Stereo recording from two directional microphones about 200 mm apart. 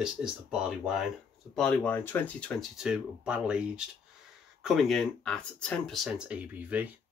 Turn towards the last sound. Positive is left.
turn(degrees=-5)  # may be behind; listen again after turning